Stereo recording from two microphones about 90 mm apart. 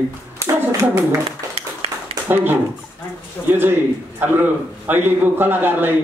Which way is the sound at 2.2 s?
20° right (ahead or behind).